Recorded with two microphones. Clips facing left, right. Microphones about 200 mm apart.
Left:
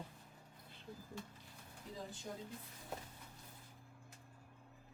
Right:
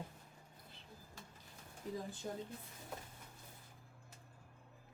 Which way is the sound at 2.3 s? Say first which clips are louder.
Right 4 dB; 50° right (ahead or behind).